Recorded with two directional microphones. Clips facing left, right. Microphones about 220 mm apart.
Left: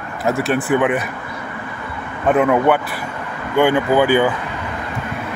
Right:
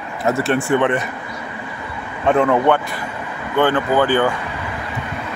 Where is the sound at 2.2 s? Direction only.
5° left (ahead or behind).